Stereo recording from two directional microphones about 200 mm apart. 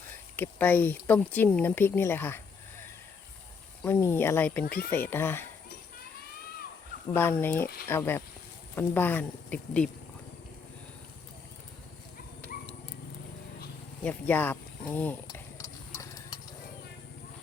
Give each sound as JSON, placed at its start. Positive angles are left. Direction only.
{"t": 0.3, "sound": "speech", "side_deg": 10}
{"t": 3.8, "sound": "speech", "side_deg": 10}
{"t": 4.6, "sound": "speech", "side_deg": 45}
{"t": 4.9, "sound": "speech", "side_deg": 10}
{"t": 7.1, "sound": "speech", "side_deg": 10}
{"t": 14.0, "sound": "a sound", "side_deg": 10}